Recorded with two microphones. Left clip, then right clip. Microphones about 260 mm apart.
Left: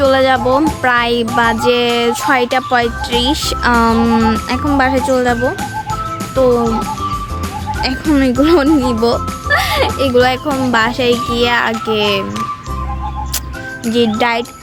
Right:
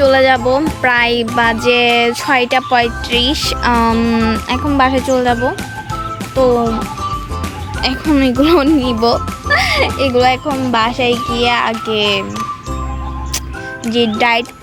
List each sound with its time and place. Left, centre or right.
0.0 s speech: centre
7.8 s speech: centre
14.2 s speech: centre